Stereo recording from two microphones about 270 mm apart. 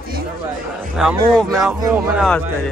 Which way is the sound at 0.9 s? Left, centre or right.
Centre.